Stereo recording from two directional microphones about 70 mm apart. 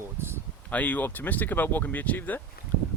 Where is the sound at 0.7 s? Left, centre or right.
Left.